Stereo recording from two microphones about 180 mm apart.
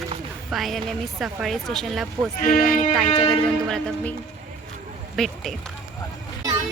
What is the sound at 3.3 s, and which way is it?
Speech, 5° left (ahead or behind).